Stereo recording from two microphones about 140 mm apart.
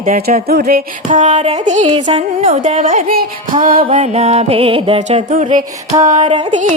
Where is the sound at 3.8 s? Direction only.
45° right (ahead or behind).